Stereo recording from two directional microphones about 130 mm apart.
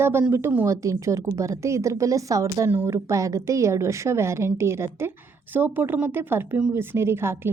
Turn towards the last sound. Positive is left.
turn(degrees=-20)  # may be behind; listen again after turning